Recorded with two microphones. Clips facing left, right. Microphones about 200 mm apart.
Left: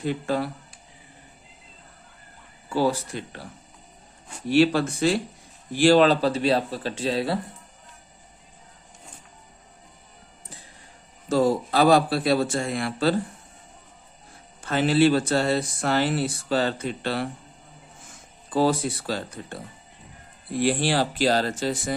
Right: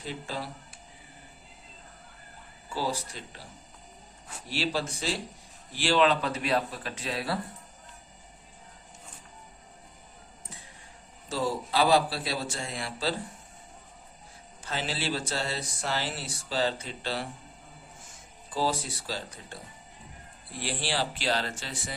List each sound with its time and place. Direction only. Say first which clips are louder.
0.0 s speech: left 11 dB; 55° left (ahead or behind)
2.6 s speech: left 9 dB; 60° left (ahead or behind)
4.4 s speech: left 12 dB; 55° left (ahead or behind)
5.7 s speech: left 8 dB; 45° left (ahead or behind); by 7.3 s 30° left (ahead or behind)
11.3 s speech: left 9 dB; 50° left (ahead or behind)
14.6 s speech: left 14 dB; 55° left (ahead or behind)
18.5 s speech: left 8 dB; 55° left (ahead or behind)
20.6 s speech: left 9 dB; 55° left (ahead or behind)